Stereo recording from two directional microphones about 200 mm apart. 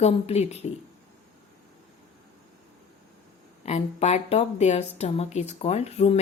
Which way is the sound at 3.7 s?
35° left (ahead or behind).